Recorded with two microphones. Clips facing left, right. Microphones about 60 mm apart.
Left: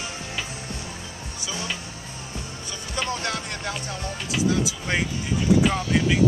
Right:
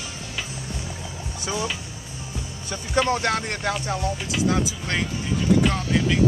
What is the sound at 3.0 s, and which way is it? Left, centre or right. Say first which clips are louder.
Speech: right 7 dB; right.